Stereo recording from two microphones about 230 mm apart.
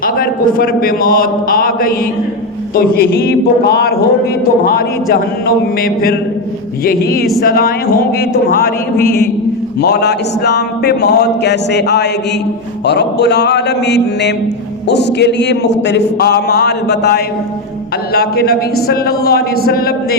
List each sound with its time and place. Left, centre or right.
0.0 s a man's voice: left
9.8 s a man's voice: left